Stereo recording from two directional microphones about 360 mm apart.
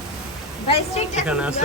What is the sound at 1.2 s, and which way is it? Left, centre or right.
Speech, centre.